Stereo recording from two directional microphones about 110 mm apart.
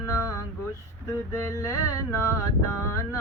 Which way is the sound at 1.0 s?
25° left (ahead or behind).